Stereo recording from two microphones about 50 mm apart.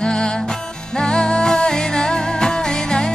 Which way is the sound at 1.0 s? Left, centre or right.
Centre.